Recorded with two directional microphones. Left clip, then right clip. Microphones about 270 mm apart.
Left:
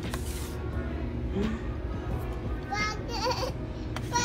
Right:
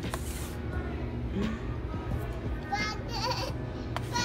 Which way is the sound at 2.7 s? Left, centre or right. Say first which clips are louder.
Left 2 dB; left.